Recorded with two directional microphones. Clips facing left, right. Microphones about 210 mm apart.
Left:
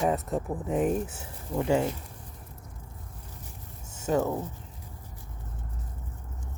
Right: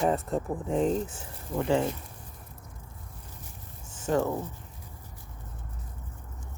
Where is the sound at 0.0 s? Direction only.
5° left (ahead or behind).